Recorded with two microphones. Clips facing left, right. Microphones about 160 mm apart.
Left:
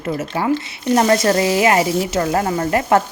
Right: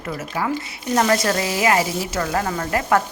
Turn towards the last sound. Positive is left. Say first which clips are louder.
# left 4 dB
turn(degrees=25)  # may be behind; listen again after turning